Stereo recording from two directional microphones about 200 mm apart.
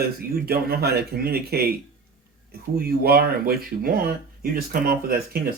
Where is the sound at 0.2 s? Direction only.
50° right (ahead or behind).